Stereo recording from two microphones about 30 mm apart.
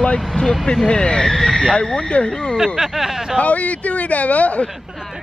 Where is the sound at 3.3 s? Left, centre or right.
Left.